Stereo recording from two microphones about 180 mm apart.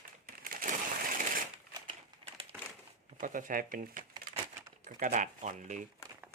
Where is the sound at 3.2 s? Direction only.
50° right (ahead or behind).